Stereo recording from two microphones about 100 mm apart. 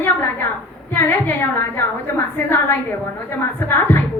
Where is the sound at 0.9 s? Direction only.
20° left (ahead or behind).